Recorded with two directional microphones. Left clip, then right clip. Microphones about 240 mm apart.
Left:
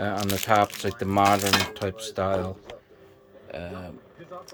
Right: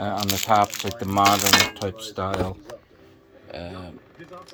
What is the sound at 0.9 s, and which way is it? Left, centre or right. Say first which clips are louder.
Speech: even; left.